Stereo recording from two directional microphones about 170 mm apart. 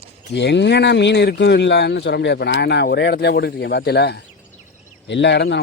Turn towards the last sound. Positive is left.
turn(degrees=90)